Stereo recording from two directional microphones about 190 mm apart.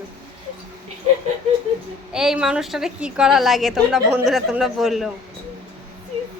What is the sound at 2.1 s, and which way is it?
A woman's voice, 5° right (ahead or behind).